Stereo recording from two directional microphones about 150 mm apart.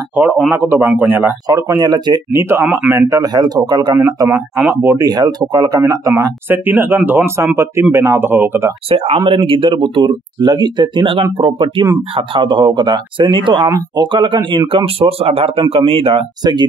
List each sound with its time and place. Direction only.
0.5 s a man's voice: 15° right (ahead or behind)
1.5 s a man's voice: 25° right (ahead or behind)
8.8 s speech: 40° right (ahead or behind)